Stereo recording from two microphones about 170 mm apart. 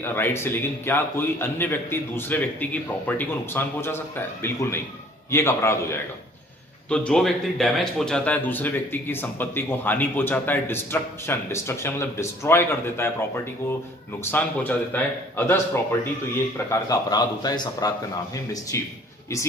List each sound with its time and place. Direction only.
0.0 s speech: 15° left (ahead or behind)
6.9 s speech: 5° left (ahead or behind)
14.2 s speech: 10° left (ahead or behind)